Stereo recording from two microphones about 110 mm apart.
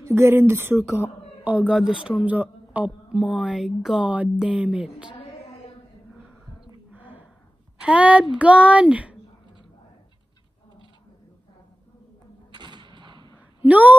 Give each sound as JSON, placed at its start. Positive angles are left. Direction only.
{"t": 0.0, "sound": "a woman's voice", "side_deg": -20}
{"t": 6.9, "sound": "gasp", "side_deg": -15}
{"t": 7.8, "sound": "a woman's voice", "side_deg": -10}
{"t": 12.5, "sound": "gunshot", "side_deg": -45}
{"t": 13.7, "sound": "a woman's voice", "side_deg": -15}